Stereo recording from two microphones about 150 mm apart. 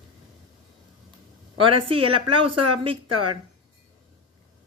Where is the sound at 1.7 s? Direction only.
35° right (ahead or behind).